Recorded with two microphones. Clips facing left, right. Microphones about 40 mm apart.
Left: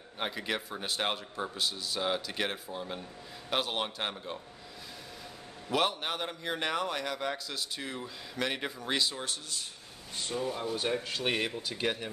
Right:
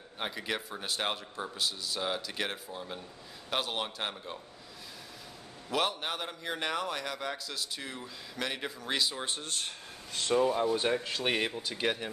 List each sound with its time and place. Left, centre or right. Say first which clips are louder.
0.2 s a man's voice: left 1 dB; centre
5.7 s a man's voice: left 1 dB; centre
9.4 s speech: right 3 dB; right
10.1 s speech: right 3 dB; right
10.5 s speech: right 4 dB; right